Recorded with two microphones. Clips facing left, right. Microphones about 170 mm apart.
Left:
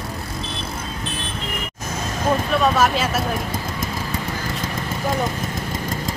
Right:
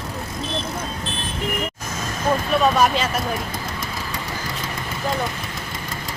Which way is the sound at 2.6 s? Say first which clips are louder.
Right 1 dB; 5° left (ahead or behind).